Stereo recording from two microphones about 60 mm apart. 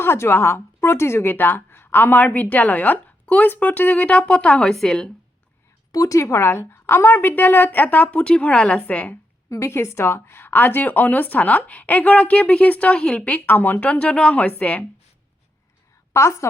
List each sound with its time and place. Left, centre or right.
0.0 s a woman's voice: left; by 4.7 s centre
4.7 s a woman's voice: centre
5.9 s speech: left
6.1 s a woman's voice: left
9.5 s a woman's voice: left
13.7 s a woman's voice: left
16.1 s a woman's voice: left